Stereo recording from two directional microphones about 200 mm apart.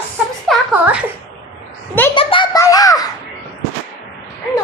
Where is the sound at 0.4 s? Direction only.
5° right (ahead or behind).